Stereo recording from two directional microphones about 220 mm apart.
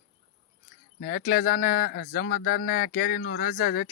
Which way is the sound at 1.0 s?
40° left (ahead or behind).